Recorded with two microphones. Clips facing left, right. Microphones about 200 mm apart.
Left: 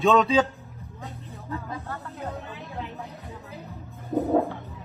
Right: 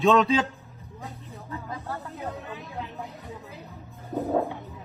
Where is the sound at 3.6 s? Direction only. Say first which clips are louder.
Left 3 dB; centre (ahead or behind).